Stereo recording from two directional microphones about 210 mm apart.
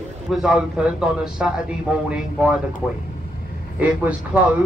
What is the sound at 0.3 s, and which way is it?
A man's voice, centre (ahead or behind).